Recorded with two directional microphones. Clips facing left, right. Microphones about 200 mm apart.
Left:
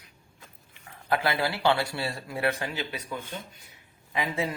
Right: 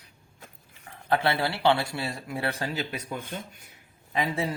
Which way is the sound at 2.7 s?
45° right (ahead or behind).